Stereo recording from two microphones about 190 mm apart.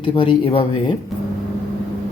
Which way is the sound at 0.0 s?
25° left (ahead or behind).